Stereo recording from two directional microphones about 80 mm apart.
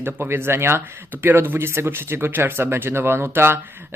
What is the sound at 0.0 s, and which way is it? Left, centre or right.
Speech, right.